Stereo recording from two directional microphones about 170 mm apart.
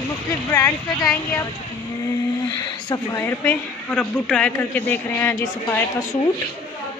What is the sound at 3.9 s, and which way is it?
A man's voice, 5° left (ahead or behind).